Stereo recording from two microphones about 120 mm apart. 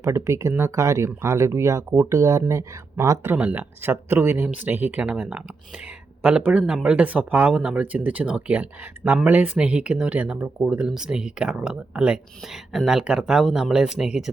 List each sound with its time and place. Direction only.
0.0 s speech: 25° right (ahead or behind)
3.3 s speech: 10° right (ahead or behind)